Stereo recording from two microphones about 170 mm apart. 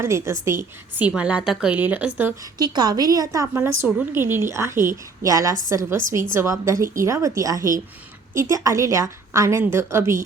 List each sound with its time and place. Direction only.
0.0 s a woman's voice: 15° right (ahead or behind)
2.6 s a woman's voice: 25° right (ahead or behind)